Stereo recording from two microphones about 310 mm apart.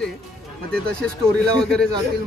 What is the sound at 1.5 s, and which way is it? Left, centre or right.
Speech, centre.